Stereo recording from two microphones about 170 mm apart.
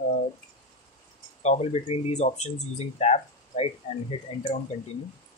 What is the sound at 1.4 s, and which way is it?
Speech, 40° left (ahead or behind).